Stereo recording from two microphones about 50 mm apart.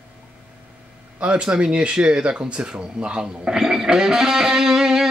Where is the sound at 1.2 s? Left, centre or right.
Right.